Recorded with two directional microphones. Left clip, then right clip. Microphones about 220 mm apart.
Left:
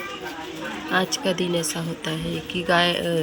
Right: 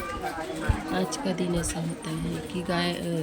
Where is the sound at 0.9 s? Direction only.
5° right (ahead or behind).